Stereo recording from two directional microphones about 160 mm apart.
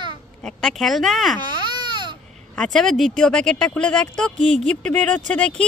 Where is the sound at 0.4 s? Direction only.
5° left (ahead or behind).